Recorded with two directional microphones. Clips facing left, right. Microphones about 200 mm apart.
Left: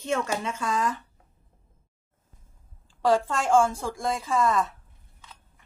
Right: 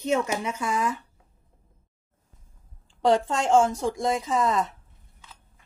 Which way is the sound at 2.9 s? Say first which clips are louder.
Right 1 dB; 20° right (ahead or behind).